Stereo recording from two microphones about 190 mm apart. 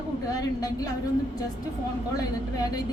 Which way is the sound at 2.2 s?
20° left (ahead or behind).